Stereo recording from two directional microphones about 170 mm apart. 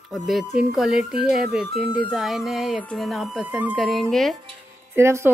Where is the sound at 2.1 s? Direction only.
Centre (ahead or behind).